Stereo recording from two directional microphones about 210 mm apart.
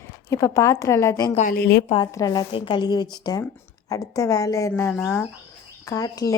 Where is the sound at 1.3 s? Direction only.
35° left (ahead or behind).